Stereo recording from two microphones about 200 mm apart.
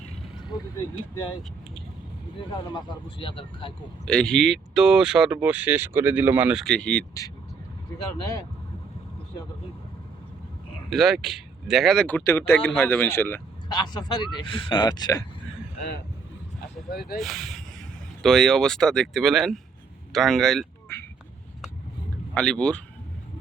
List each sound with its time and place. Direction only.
2.5 s speech: 25° left (ahead or behind)
4.0 s speech: 5° left (ahead or behind)
10.8 s speech: centre (ahead or behind); by 15.2 s 20° left (ahead or behind)
16.6 s speech: 50° left (ahead or behind)
17.2 s speech: centre (ahead or behind)
22.4 s speech: 5° left (ahead or behind)